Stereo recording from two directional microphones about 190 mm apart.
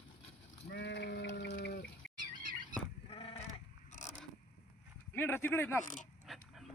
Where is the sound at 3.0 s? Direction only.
30° left (ahead or behind).